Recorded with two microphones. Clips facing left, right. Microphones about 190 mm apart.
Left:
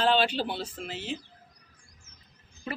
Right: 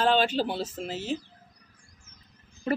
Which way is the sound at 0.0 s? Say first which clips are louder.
Right 1 dB; 45° right (ahead or behind).